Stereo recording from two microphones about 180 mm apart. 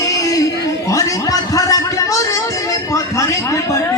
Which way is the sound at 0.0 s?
20° left (ahead or behind).